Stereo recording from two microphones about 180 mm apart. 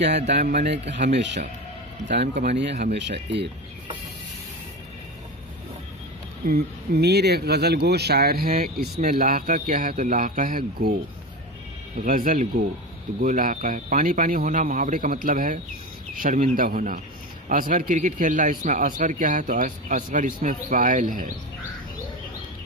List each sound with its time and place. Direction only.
0.0 s speech: 70° right (ahead or behind)
0.4 s a man's voice: 40° right (ahead or behind)
0.7 s speech: 75° right (ahead or behind)
2.4 s speech: 70° right (ahead or behind)
6.4 s speech: 60° right (ahead or behind)
12.0 s a man's voice: 50° right (ahead or behind)